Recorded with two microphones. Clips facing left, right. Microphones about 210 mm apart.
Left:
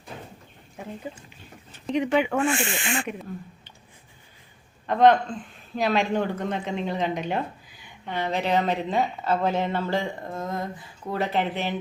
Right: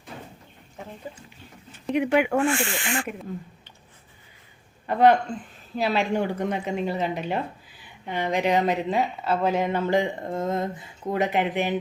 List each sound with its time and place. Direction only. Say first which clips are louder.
1.9 s speech: right 1 dB; 10° right (ahead or behind)
2.5 s speech: even; 20° left (ahead or behind)
4.9 s speech: even; 10° right (ahead or behind)